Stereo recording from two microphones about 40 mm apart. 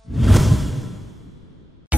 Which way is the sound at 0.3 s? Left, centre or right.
Centre.